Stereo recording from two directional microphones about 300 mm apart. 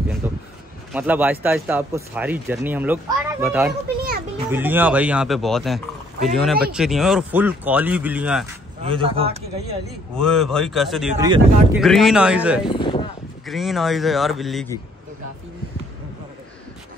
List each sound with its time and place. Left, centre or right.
0.2 s a sound: centre
0.9 s speech: centre
8.8 s speech: centre
10.1 s speech: centre
11.1 s speech: centre
11.7 s speech: centre
12.6 s a sound: centre
13.5 s speech: centre